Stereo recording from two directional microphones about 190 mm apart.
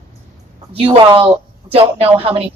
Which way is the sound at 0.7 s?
30° right (ahead or behind).